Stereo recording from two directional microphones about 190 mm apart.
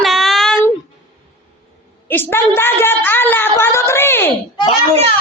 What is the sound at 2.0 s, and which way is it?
A woman's voice, 10° left (ahead or behind).